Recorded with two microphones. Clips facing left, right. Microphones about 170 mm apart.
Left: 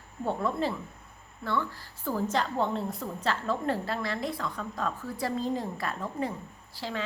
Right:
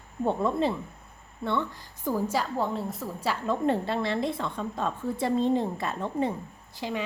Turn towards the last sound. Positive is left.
turn(degrees=-15)  # may be behind; listen again after turning